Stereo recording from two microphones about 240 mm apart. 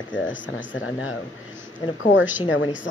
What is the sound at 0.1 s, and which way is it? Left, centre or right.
Speech, left.